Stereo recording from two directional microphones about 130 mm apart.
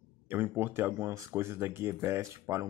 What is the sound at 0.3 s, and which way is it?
Speech, 15° right (ahead or behind).